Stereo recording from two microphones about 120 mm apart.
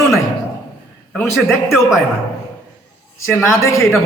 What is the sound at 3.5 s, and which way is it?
Speech, 25° left (ahead or behind).